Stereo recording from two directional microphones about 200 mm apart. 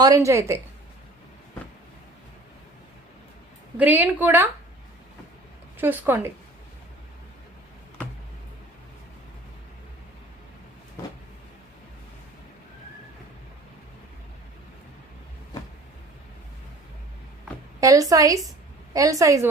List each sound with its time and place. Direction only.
0.0 s a woman's voice: 15° right (ahead or behind)
3.8 s a woman's voice: 10° right (ahead or behind)
5.7 s speech: 10° right (ahead or behind)
17.7 s a woman's voice: 15° right (ahead or behind)